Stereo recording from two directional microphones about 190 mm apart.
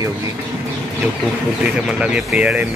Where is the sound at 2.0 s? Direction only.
5° right (ahead or behind).